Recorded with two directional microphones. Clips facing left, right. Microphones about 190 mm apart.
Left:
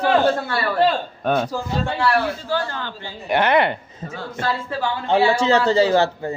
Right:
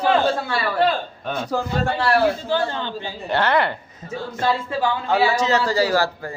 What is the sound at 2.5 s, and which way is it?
Speech, 20° right (ahead or behind).